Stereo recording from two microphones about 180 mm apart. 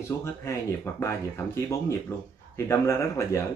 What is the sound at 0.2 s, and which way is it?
Speech, 15° left (ahead or behind).